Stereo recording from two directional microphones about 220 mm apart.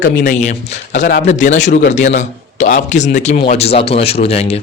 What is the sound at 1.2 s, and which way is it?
A man's voice, 35° left (ahead or behind).